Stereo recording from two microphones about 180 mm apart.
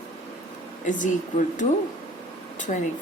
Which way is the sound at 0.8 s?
45° left (ahead or behind).